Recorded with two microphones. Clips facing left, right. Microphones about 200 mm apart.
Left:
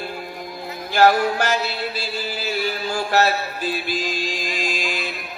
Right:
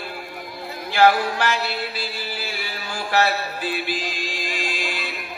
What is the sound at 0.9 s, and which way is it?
Male singing, 45° left (ahead or behind).